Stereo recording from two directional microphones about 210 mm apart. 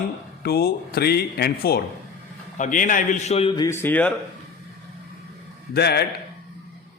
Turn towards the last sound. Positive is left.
turn(degrees=50)  # may be behind; listen again after turning